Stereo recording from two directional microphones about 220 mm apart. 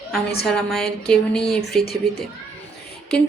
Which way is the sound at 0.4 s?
Centre (ahead or behind).